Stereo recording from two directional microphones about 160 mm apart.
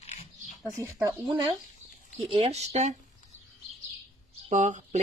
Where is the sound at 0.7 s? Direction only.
15° right (ahead or behind).